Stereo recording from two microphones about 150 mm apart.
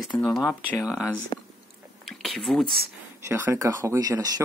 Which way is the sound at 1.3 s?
30° left (ahead or behind).